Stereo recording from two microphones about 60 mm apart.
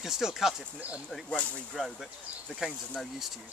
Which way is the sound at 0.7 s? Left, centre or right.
Right.